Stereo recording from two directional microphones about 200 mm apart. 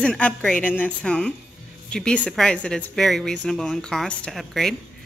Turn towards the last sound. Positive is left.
turn(degrees=0)  # may be behind; listen again after turning